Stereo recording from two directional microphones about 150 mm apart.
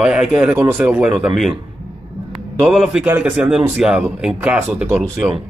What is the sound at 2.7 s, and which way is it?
Speech, 5° right (ahead or behind).